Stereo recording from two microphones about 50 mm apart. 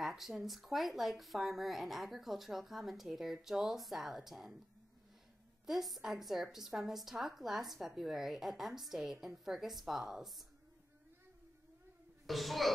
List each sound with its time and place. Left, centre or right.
0.0 s a woman's voice: centre
5.7 s a woman's voice: centre
12.3 s a woman's voice: centre